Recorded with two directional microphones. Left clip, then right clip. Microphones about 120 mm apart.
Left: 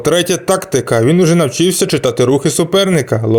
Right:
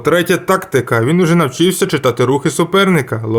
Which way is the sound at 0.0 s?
40° left (ahead or behind).